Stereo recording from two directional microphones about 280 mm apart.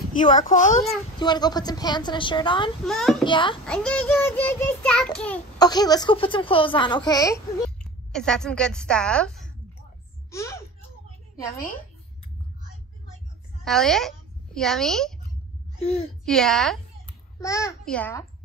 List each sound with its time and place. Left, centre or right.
0.2 s speech: left
1.2 s a woman's voice: centre
2.8 s a child's voice: centre
3.3 s a woman's voice: centre
3.6 s a child's voice: centre
13.7 s a woman's voice: centre
15.8 s speech: left
16.3 s a child's voice: centre